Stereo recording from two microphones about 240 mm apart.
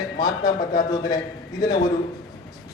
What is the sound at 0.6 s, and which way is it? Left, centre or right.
Speech, left.